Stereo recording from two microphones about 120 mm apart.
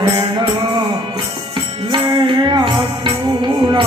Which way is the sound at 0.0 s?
40° right (ahead or behind).